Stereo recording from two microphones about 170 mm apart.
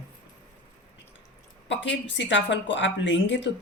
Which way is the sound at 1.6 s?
90° left.